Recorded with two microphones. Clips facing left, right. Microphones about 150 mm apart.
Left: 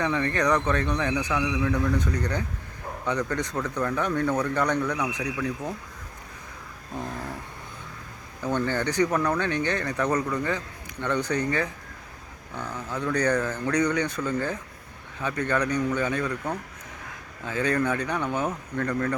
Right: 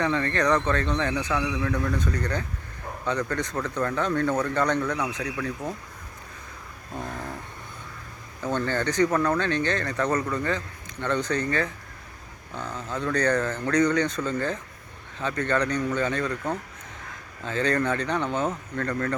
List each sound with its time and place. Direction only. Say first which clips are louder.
0.0 s speech: right 1 dB; 15° left (ahead or behind)
1.4 s a man's voice: left 1 dB; 5° right (ahead or behind)
1.6 s speech: left 2 dB; 15° left (ahead or behind)
8.4 s speech: even; 15° left (ahead or behind)
17.4 s speech: even; 10° left (ahead or behind)